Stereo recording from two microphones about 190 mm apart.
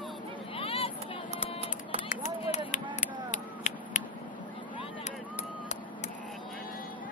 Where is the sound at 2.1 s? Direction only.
40° left (ahead or behind).